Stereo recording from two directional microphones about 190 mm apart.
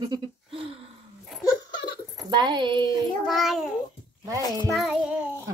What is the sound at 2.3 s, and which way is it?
Speech, 25° right (ahead or behind).